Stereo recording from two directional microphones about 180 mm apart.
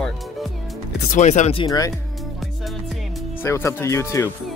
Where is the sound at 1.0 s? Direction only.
40° left (ahead or behind).